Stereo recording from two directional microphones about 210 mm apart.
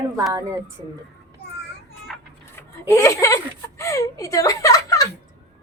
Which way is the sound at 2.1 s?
Centre (ahead or behind).